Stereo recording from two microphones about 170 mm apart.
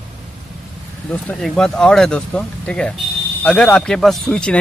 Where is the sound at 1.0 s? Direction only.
5° left (ahead or behind).